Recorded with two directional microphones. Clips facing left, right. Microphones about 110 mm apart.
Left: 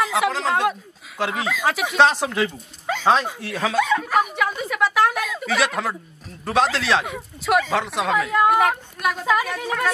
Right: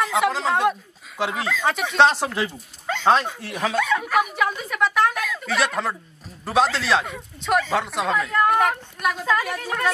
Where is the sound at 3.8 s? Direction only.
15° left (ahead or behind).